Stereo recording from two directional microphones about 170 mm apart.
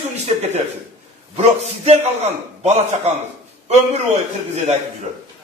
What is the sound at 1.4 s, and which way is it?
A man's voice, 40° right (ahead or behind).